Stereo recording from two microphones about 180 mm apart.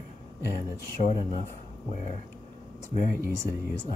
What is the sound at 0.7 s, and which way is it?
Speech, 55° left (ahead or behind).